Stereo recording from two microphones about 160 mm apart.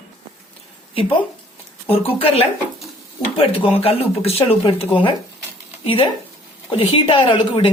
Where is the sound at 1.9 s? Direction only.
35° left (ahead or behind).